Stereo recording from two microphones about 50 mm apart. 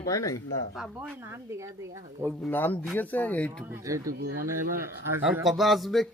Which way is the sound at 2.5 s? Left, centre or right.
Left.